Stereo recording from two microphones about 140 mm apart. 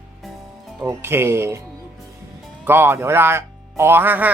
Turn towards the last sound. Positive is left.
turn(degrees=-15)  # may be behind; listen again after turning